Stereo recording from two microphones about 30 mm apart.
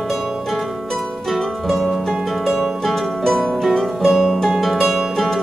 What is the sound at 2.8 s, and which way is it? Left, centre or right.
Music, centre.